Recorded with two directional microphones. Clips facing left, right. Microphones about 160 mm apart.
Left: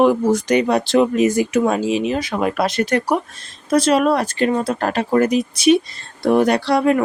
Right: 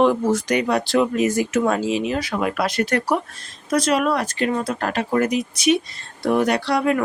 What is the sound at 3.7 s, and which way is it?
Speech, 30° left (ahead or behind).